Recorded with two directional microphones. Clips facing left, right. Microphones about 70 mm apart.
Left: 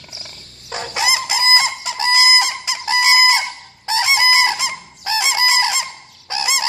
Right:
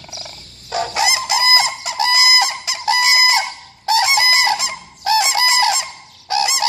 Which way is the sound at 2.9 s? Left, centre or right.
Left.